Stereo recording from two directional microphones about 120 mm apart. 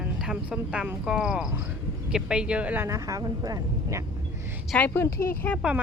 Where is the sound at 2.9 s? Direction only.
25° right (ahead or behind).